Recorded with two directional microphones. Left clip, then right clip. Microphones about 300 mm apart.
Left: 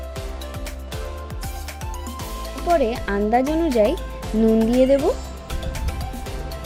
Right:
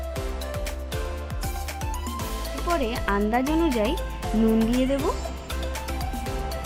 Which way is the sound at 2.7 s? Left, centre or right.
Centre.